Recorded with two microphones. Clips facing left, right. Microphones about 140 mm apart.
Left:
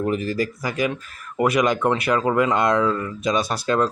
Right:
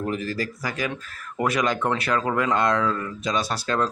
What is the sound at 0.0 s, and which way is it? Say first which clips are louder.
Speech: left 5 dB; 15° left (ahead or behind).